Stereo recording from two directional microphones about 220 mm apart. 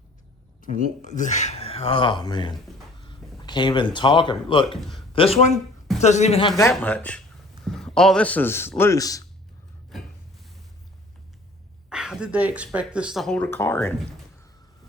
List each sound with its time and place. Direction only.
0.6 s speech: 35° left (ahead or behind)
4.8 s a man's voice: centre (ahead or behind)
5.1 s speech: 25° left (ahead or behind)
6.7 s a man's voice: 5° left (ahead or behind)
11.9 s speech: 5° right (ahead or behind)